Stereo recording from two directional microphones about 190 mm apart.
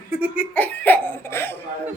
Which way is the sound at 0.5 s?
10° left (ahead or behind).